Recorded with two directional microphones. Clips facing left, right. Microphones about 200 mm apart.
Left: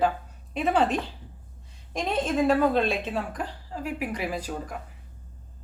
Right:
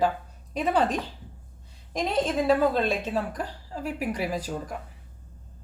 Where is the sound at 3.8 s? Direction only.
40° right (ahead or behind).